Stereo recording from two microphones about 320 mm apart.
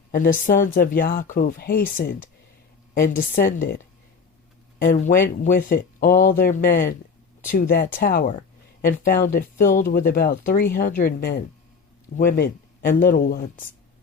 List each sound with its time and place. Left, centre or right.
0.1 s speech: left
4.8 s speech: left